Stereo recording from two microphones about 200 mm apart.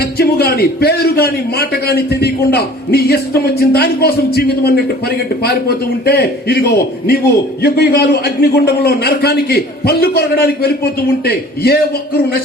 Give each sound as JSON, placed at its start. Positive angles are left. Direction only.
{"t": 0.0, "sound": "a man's voice", "side_deg": 50}